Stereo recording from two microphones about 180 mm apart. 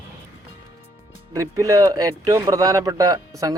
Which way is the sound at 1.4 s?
20° right (ahead or behind).